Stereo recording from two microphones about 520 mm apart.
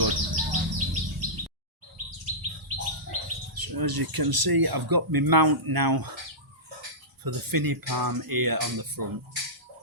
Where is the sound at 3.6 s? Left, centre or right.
Right.